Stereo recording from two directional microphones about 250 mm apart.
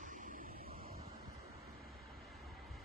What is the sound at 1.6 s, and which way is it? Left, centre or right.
Vehicle, left.